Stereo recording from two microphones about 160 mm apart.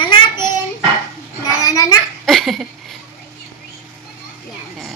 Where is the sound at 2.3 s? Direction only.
Centre (ahead or behind).